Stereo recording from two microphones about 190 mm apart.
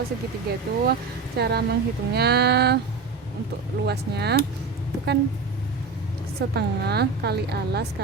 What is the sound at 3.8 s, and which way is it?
Speech, 60° right (ahead or behind).